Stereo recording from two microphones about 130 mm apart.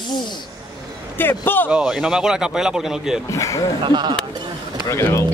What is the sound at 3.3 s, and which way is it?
Speech, 25° left (ahead or behind).